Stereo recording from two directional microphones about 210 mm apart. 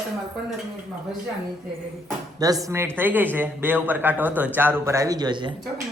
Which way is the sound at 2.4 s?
15° right (ahead or behind).